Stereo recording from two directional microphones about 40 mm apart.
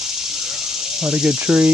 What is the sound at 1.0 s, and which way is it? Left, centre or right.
Speech, right.